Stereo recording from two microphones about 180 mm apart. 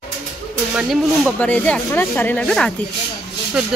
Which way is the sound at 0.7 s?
5° left (ahead or behind).